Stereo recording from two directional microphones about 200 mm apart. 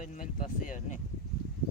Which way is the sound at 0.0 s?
40° left (ahead or behind).